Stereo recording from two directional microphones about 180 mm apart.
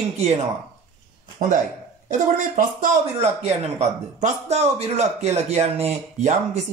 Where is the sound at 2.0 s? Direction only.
45° right (ahead or behind).